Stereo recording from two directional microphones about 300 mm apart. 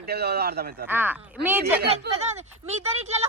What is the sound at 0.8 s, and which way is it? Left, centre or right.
Speech, centre.